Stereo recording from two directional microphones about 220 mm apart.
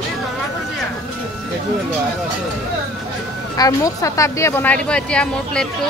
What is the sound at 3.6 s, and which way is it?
Speech, 15° left (ahead or behind).